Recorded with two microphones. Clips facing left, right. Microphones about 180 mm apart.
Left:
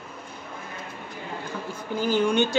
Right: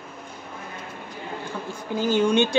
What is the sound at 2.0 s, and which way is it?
Speech, 20° right (ahead or behind).